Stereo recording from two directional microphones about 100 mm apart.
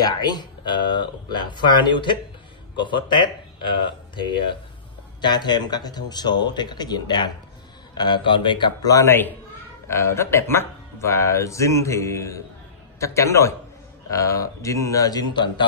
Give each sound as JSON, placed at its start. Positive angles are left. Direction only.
{"t": 0.0, "sound": "speech", "side_deg": 45}
{"t": 8.8, "sound": "speech", "side_deg": 30}